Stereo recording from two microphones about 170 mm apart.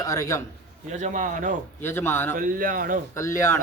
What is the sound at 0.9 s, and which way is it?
Speech, 45° right (ahead or behind).